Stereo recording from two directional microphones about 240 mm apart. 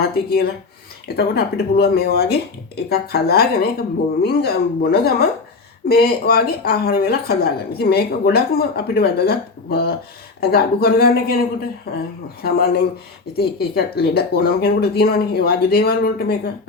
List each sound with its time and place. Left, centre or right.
0.0 s a woman's voice: left